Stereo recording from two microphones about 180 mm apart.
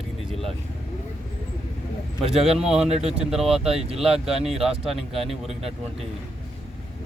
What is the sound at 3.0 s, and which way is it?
Speech, 35° right (ahead or behind).